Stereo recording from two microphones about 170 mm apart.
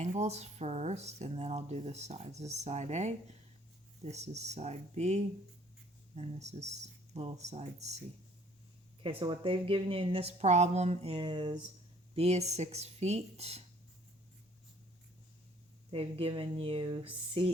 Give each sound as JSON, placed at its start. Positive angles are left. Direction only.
{"t": 0.0, "sound": "speech", "side_deg": -40}
{"t": 9.0, "sound": "speech", "side_deg": -35}
{"t": 12.1, "sound": "speech", "side_deg": -40}
{"t": 15.9, "sound": "speech", "side_deg": -35}